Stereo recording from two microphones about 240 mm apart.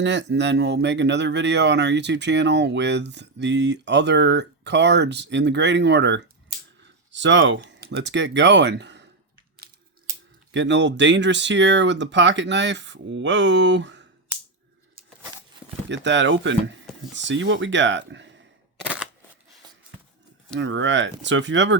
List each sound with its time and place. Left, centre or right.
0.0 s speech: right
10.5 s speech: right
15.9 s speech: right
20.6 s speech: right